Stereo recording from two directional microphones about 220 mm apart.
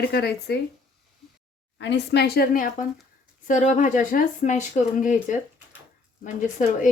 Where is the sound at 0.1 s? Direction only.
45° left (ahead or behind).